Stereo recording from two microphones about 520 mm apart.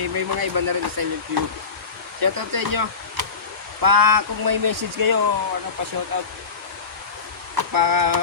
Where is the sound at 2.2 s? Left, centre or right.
Right.